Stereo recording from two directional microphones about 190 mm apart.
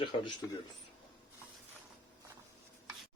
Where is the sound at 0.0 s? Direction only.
25° left (ahead or behind).